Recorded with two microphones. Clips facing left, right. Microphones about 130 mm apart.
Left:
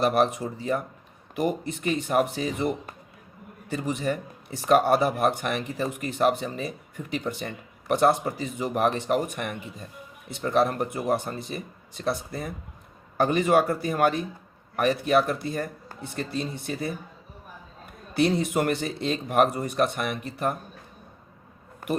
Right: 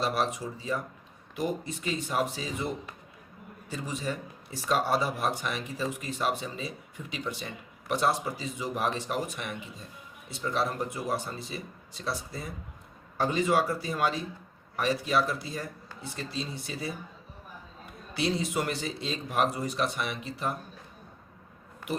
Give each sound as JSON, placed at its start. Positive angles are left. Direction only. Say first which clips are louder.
{"t": 0.0, "sound": "speech", "louder": "left 7 dB", "side_deg": 55}
{"t": 18.1, "sound": "speech", "louder": "left 6 dB", "side_deg": 55}